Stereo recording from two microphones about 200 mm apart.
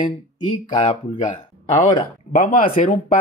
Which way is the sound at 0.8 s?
35° left (ahead or behind).